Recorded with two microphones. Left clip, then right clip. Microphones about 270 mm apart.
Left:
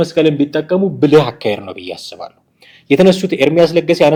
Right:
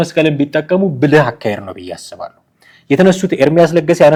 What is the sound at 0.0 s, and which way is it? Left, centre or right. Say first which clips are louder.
Speech: left 1 dB; right.